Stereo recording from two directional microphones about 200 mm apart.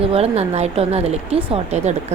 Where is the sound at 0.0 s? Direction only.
30° right (ahead or behind).